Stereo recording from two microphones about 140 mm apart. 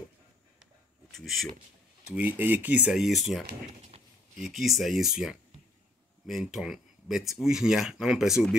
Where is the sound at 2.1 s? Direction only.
10° right (ahead or behind).